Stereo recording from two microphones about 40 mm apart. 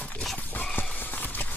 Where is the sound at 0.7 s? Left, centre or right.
Left.